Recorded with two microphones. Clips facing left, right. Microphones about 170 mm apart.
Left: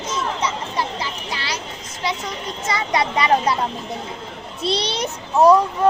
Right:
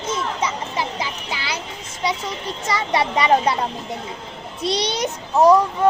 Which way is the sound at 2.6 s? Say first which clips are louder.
Even; 35° right (ahead or behind).